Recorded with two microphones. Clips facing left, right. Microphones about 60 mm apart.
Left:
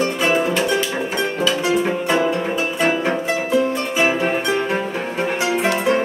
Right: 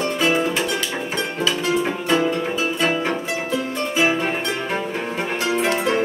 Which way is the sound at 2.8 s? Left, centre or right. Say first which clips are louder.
Left 4 dB; centre.